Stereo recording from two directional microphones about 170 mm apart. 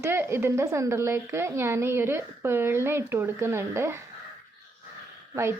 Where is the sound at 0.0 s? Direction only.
15° right (ahead or behind).